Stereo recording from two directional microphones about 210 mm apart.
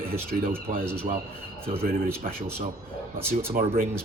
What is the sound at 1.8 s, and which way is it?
Speech, 45° right (ahead or behind).